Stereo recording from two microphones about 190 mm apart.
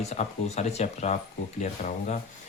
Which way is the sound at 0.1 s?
35° left (ahead or behind).